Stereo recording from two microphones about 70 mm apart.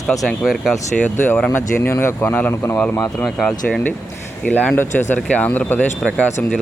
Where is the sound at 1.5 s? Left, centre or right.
Left.